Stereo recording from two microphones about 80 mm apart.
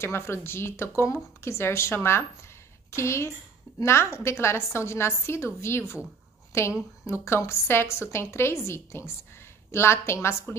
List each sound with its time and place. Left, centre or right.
0.0 s a woman's voice: left